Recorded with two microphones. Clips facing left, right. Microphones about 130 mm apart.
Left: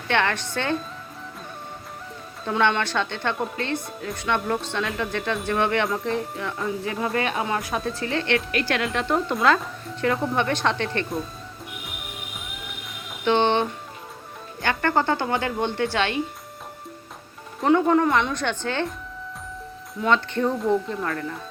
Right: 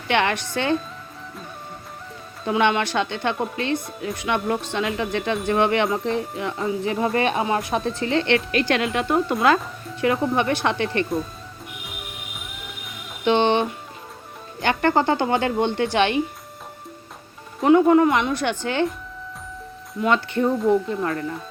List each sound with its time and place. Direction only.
0.1 s speech: 15° right (ahead or behind)
2.6 s speech: 15° right (ahead or behind)
3.3 s speech: 5° right (ahead or behind)
3.6 s speech: 15° right (ahead or behind)
13.2 s speech: 15° right (ahead or behind)
17.6 s speech: 5° right (ahead or behind)
20.0 s speech: 10° right (ahead or behind)